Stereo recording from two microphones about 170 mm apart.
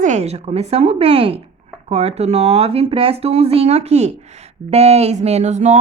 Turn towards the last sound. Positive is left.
turn(degrees=-45)  # may be behind; listen again after turning